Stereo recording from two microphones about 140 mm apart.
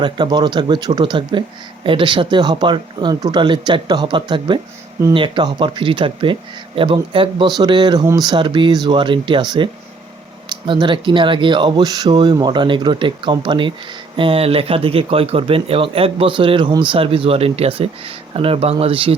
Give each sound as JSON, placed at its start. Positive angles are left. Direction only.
{"t": 0.0, "sound": "speech", "side_deg": -30}
{"t": 10.7, "sound": "speech", "side_deg": -35}